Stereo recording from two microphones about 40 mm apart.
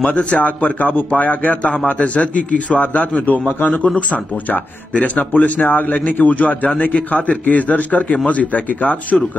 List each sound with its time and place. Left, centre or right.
0.0 s a man's voice: left
9.1 s speech: centre